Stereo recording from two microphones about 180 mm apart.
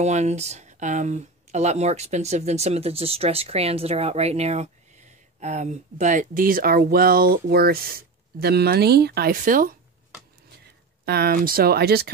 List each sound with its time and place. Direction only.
0.0 s speech: 40° right (ahead or behind)
11.1 s speech: 60° right (ahead or behind)